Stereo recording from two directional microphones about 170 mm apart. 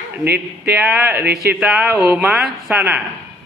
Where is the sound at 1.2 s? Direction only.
65° right (ahead or behind).